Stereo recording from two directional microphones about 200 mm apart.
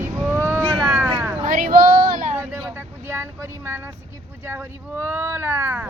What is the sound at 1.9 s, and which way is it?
Female singing, 40° right (ahead or behind).